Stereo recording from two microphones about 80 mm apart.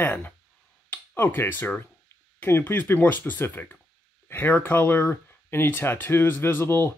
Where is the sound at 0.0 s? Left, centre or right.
Left.